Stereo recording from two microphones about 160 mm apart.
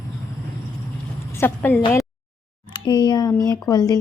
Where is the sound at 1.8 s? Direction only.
30° left (ahead or behind).